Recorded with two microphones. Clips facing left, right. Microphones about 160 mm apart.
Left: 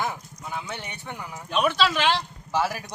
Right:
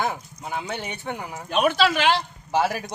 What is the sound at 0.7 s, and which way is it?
Speech, 60° right (ahead or behind).